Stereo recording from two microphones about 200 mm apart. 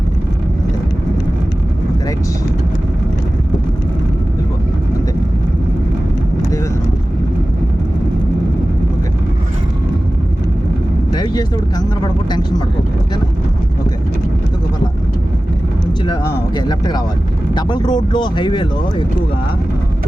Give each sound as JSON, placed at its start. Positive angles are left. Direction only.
{"t": 11.1, "sound": "vehicle", "side_deg": 20}
{"t": 16.6, "sound": "a sound", "side_deg": 20}
{"t": 17.5, "sound": "speech", "side_deg": 20}